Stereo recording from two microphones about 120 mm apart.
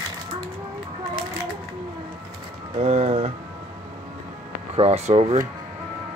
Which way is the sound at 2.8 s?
60° right (ahead or behind).